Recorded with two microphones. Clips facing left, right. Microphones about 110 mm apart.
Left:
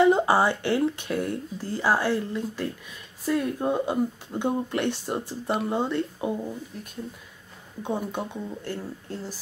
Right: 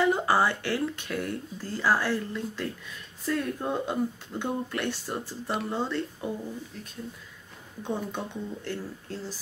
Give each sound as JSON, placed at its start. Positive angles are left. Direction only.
{"t": 0.0, "sound": "a sound", "side_deg": 20}
{"t": 0.7, "sound": "speech", "side_deg": 15}
{"t": 1.1, "sound": "speech", "side_deg": 50}
{"t": 1.7, "sound": "speech", "side_deg": 15}
{"t": 7.8, "sound": "speech", "side_deg": 10}